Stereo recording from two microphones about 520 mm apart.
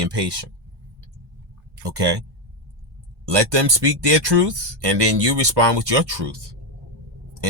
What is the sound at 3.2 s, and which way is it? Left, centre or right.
Speech, right.